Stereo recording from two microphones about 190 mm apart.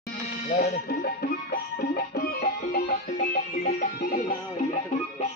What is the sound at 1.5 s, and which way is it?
Music, 50° left (ahead or behind).